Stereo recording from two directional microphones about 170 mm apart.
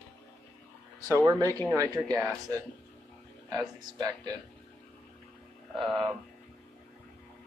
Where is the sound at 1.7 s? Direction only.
15° right (ahead or behind).